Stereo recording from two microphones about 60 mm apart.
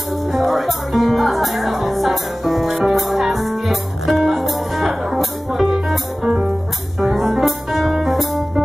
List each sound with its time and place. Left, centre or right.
0.3 s music: centre
2.9 s speech: centre
4.3 s music: centre
6.2 s music: centre
7.0 s music: centre